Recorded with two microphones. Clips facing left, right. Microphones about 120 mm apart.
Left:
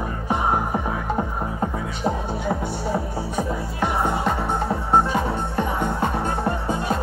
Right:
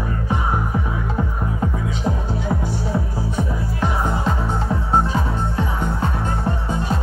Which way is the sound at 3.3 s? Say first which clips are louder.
Even; 60° left (ahead or behind).